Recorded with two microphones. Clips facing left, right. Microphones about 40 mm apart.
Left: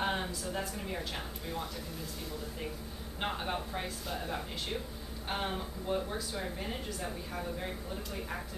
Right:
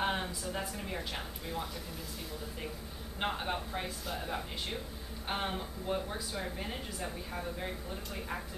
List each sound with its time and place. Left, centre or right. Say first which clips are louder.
0.0 s a woman's voice: even; centre
3.2 s speech: right 1 dB; centre